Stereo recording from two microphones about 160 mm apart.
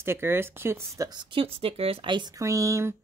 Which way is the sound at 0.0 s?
15° right (ahead or behind).